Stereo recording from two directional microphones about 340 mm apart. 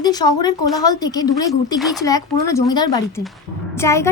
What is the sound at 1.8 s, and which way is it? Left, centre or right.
A woman's voice, centre.